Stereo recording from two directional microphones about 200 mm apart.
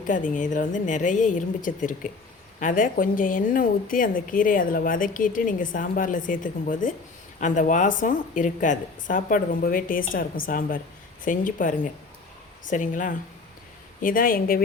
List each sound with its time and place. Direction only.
0.1 s a woman's voice: 40° left (ahead or behind)